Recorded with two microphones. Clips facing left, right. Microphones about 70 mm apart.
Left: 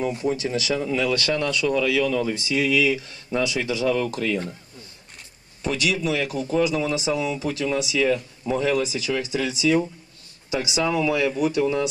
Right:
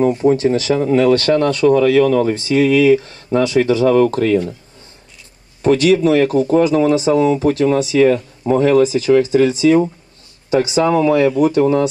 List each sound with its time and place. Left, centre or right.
0.0 s speech: right
5.6 s speech: right